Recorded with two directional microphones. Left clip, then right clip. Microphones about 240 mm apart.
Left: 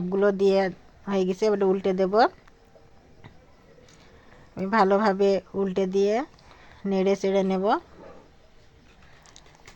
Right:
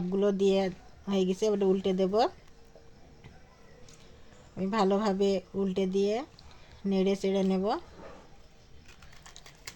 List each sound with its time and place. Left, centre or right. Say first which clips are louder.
0.1 s speech: left 5 dB; centre
4.5 s speech: left 7 dB; centre